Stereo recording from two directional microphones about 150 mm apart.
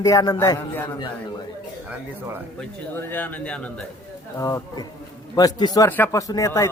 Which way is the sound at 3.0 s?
10° left (ahead or behind).